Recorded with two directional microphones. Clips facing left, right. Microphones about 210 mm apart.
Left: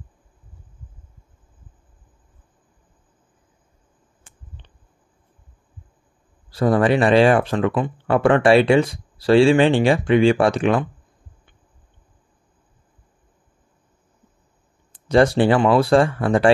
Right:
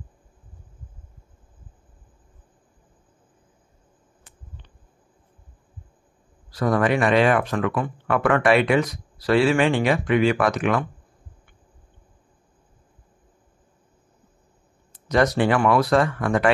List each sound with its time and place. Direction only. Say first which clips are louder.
6.5 s speech: left 4 dB; 30° left (ahead or behind)
15.0 s speech: left 4 dB; 30° left (ahead or behind)